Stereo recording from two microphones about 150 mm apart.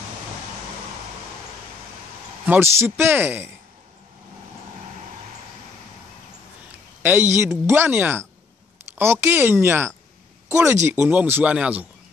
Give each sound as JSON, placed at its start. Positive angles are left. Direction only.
{"t": 2.4, "sound": "speech", "side_deg": -15}
{"t": 7.0, "sound": "a sound", "side_deg": -10}
{"t": 7.3, "sound": "speech", "side_deg": -15}